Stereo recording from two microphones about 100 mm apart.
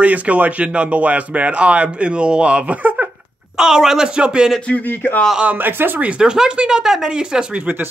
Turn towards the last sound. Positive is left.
turn(degrees=-10)  # may be behind; listen again after turning